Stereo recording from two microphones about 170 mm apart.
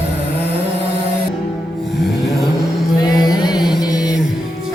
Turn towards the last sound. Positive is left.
turn(degrees=20)  # may be behind; listen again after turning